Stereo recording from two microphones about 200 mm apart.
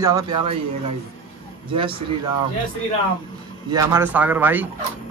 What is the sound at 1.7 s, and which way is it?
Speech, 25° right (ahead or behind).